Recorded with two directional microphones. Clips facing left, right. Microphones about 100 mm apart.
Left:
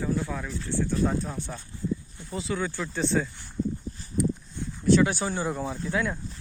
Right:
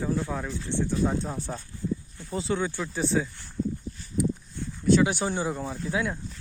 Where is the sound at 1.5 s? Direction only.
35° right (ahead or behind).